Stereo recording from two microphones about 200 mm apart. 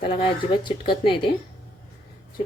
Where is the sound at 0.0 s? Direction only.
25° left (ahead or behind).